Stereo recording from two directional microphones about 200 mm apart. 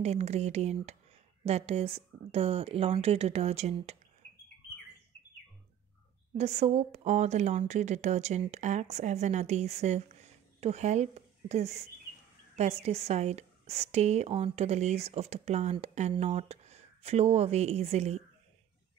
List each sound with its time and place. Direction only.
0.0 s a woman's voice: 30° right (ahead or behind)
6.3 s a woman's voice: 35° right (ahead or behind)